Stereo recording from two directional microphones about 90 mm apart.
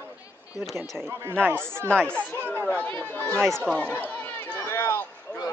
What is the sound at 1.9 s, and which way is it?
Speech, 10° left (ahead or behind).